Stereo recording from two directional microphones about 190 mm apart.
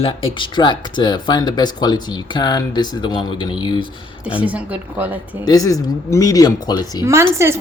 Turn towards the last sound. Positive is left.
turn(degrees=-15)  # may be behind; listen again after turning